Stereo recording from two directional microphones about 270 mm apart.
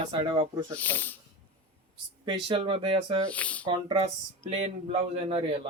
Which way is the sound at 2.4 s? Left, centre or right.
Centre.